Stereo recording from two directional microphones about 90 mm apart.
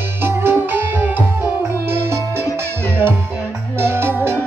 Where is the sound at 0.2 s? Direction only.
25° right (ahead or behind).